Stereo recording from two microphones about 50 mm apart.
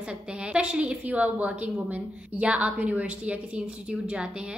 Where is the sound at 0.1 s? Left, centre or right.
Right.